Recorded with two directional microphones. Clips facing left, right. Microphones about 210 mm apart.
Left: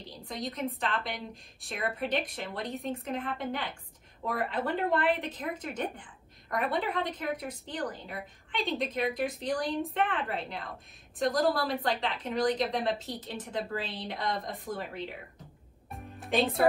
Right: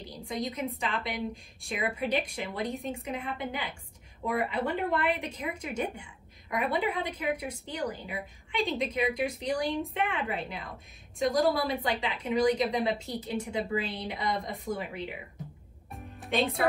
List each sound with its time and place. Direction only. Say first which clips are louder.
0.4 s a woman's voice: even; centre (ahead or behind)
15.9 s music: left 1 dB; centre (ahead or behind)